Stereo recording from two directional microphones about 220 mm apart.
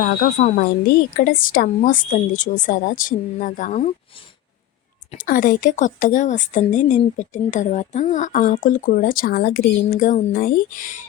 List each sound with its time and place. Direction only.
0.0 s speech: 40° left (ahead or behind)
5.2 s speech: 40° left (ahead or behind)